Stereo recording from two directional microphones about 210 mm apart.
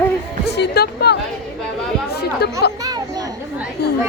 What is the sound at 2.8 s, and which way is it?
Children playing, 15° right (ahead or behind).